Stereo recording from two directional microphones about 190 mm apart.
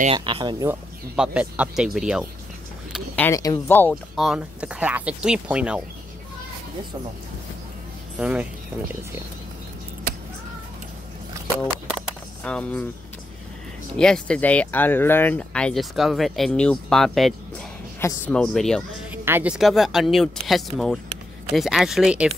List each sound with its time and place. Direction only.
0.0 s speech: 30° right (ahead or behind)
0.7 s speech: 5° right (ahead or behind)
2.9 s speech: 10° left (ahead or behind)
3.3 s speech: 20° left (ahead or behind)
4.2 s speech: 5° right (ahead or behind)
8.2 s speech: 5° right (ahead or behind)
12.4 s speech: 5° left (ahead or behind)
13.9 s speech: 5° left (ahead or behind)
19.2 s speech: 10° right (ahead or behind)